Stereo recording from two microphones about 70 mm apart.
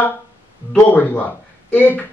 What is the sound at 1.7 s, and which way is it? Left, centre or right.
Speech, left.